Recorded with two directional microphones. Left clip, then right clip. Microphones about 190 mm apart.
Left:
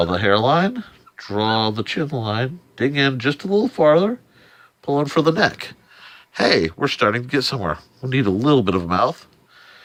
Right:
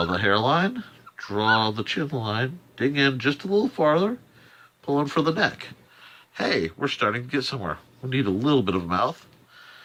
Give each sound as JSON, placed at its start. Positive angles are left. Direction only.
{"t": 0.0, "sound": "speech", "side_deg": 45}